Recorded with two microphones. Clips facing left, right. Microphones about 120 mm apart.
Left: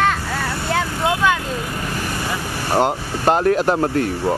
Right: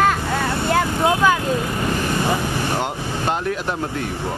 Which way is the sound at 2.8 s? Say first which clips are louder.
Left 5 dB; 45° left (ahead or behind).